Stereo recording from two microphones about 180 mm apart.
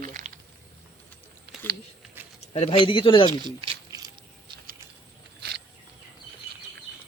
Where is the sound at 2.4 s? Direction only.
35° left (ahead or behind).